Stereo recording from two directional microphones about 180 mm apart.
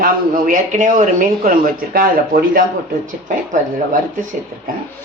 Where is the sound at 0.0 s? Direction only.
50° right (ahead or behind).